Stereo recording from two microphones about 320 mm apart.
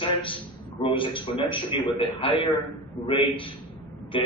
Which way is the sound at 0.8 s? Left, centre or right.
Centre.